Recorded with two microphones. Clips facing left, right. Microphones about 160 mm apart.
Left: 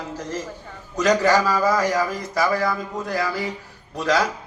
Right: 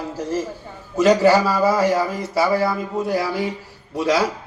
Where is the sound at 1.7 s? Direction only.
30° right (ahead or behind).